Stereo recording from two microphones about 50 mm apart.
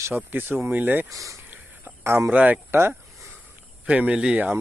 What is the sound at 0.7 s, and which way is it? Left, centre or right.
Speech, right.